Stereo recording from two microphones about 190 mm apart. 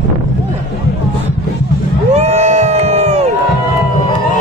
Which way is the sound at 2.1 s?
35° right (ahead or behind).